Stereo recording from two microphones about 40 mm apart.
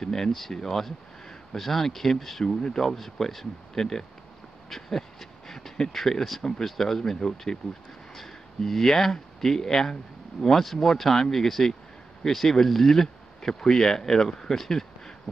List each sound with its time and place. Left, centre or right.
0.0 s speech: centre
2.4 s speech: centre
2.8 s speech: centre
4.6 s a sound: centre
5.8 s speech: centre